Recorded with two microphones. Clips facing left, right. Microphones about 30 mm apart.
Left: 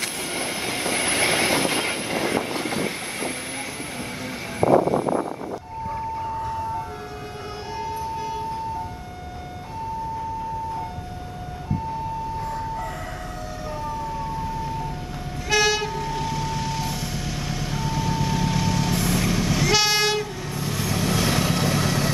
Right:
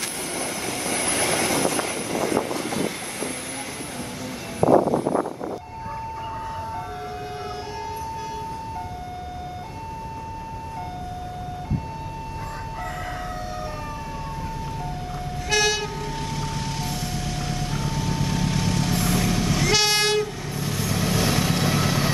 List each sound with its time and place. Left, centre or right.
0.3 s train: left
2.6 s train: left
4.6 s vehicle: left
15.5 s vehicle: centre